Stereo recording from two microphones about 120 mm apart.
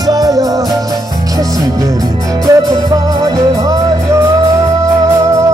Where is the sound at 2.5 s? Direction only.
30° right (ahead or behind).